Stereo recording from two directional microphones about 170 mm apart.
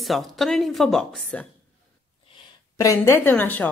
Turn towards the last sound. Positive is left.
turn(degrees=10)  # may be behind; listen again after turning